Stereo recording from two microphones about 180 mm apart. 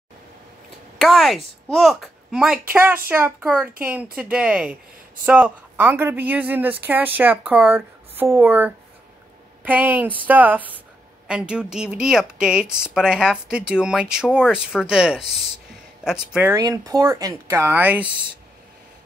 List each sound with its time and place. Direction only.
0.9 s a child's voice: centre (ahead or behind)
16.5 s speech: 20° right (ahead or behind)